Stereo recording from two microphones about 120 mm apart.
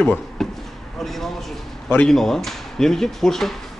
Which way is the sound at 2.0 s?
5° left (ahead or behind).